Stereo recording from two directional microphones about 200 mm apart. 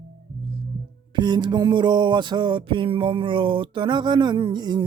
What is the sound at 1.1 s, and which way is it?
Music, 20° right (ahead or behind).